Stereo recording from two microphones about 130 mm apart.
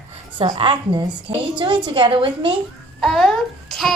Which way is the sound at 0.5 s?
40° right (ahead or behind).